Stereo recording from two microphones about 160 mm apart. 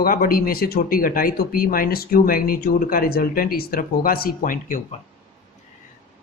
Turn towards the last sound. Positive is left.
turn(degrees=60)  # may be behind; listen again after turning